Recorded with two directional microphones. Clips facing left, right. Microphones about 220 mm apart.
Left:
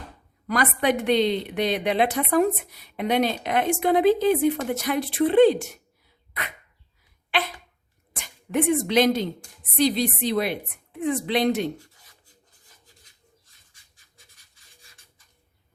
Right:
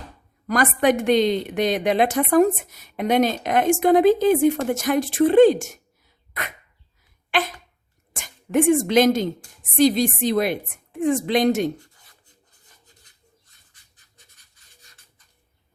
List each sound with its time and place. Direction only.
0.4 s a woman's voice: 45° right (ahead or behind)
7.3 s a sound: 45° right (ahead or behind)
8.1 s a woman's voice: 45° right (ahead or behind)